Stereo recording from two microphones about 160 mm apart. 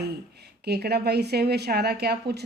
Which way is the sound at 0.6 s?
85° right.